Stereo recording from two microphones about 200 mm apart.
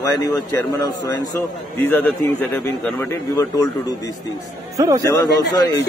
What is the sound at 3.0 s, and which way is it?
Speech, 15° left (ahead or behind).